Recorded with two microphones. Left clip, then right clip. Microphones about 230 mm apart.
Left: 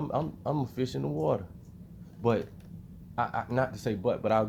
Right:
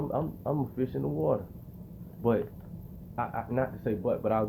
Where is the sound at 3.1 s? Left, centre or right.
Left.